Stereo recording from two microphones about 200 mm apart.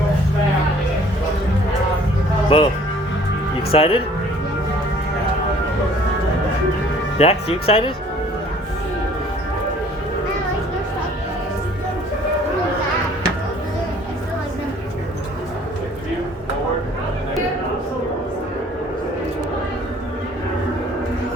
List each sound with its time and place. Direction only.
2.5 s speech: 30° left (ahead or behind)
3.7 s speech: 30° left (ahead or behind)
7.2 s speech: 30° left (ahead or behind)